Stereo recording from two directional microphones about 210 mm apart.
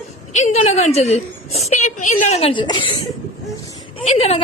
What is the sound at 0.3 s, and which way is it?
Speech, 35° left (ahead or behind).